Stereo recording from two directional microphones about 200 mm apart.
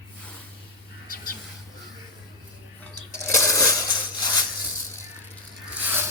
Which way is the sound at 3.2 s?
15° left (ahead or behind).